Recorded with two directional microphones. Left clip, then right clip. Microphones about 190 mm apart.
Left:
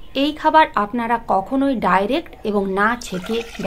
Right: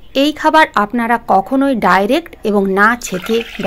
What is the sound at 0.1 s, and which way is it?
Speech, 35° right (ahead or behind).